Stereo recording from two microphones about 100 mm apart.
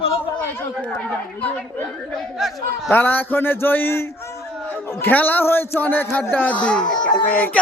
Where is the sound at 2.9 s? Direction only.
20° left (ahead or behind).